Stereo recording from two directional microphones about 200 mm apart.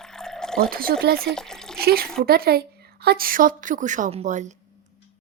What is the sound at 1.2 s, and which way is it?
Speech, centre (ahead or behind).